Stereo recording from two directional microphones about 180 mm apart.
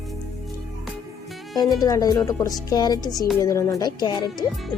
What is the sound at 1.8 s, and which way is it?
Speech, 20° left (ahead or behind).